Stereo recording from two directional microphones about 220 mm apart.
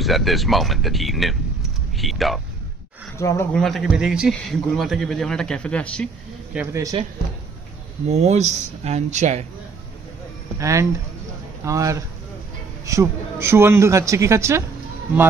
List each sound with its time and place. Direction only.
0.0 s speech: centre (ahead or behind)
3.2 s speech: 15° left (ahead or behind)
3.5 s a man's voice: centre (ahead or behind)
6.5 s a man's voice: 10° right (ahead or behind)
8.1 s speech: 30° right (ahead or behind)
10.6 s a man's voice: 15° right (ahead or behind)